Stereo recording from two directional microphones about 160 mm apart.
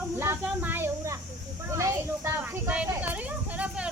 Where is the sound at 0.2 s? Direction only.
15° right (ahead or behind).